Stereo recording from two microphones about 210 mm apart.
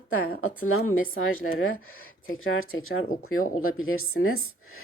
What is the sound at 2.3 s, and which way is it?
Speech, 70° left (ahead or behind).